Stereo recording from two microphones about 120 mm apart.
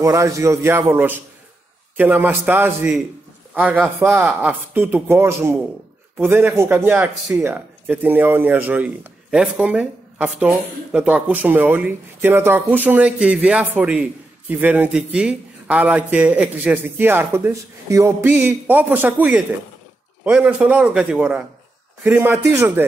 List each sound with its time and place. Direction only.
0.0 s a man's voice: 25° right (ahead or behind)